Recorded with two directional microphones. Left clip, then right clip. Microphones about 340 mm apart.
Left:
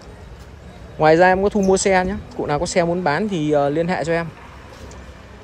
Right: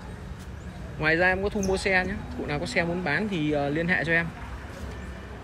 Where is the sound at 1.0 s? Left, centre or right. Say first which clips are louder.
Left 10 dB; centre.